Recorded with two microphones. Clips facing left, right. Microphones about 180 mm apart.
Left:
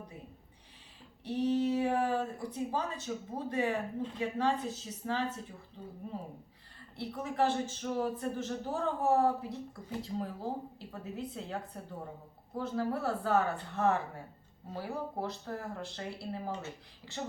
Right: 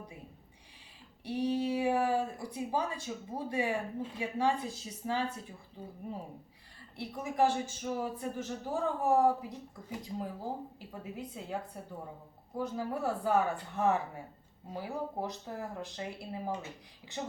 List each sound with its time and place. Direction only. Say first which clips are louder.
1.2 s speech: left 2 dB; 10° right (ahead or behind)